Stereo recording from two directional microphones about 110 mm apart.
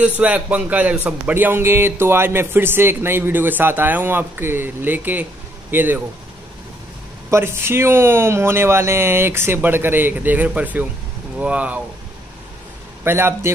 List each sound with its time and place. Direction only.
0.0 s speech: 10° right (ahead or behind)
7.2 s speech: 25° right (ahead or behind)
13.0 s speech: 20° right (ahead or behind)